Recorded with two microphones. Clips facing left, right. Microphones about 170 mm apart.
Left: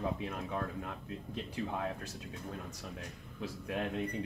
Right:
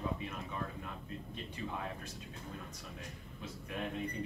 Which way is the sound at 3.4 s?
90° left.